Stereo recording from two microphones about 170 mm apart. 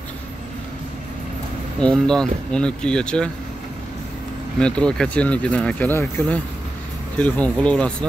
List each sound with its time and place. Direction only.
1.8 s speech: 5° left (ahead or behind)
4.6 s speech: 5° left (ahead or behind)